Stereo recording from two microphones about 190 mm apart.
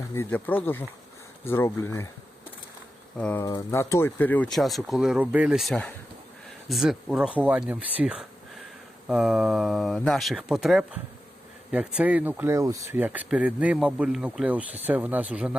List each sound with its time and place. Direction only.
0.1 s speech: 10° left (ahead or behind)
3.2 s speech: 5° left (ahead or behind)
3.4 s speech: 15° left (ahead or behind); by 15.5 s 5° right (ahead or behind)